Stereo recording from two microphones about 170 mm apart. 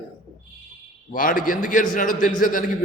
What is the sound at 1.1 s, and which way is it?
A man's voice, 50° left (ahead or behind).